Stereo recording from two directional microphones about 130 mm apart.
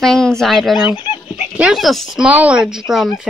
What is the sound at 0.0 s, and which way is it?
Speech, 5° left (ahead or behind).